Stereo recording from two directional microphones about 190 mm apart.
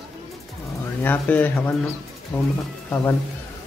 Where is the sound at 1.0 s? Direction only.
10° left (ahead or behind).